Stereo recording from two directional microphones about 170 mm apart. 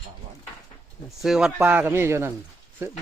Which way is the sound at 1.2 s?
Centre (ahead or behind).